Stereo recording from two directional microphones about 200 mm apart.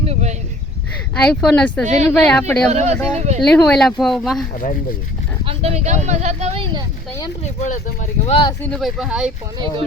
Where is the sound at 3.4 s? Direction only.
5° left (ahead or behind).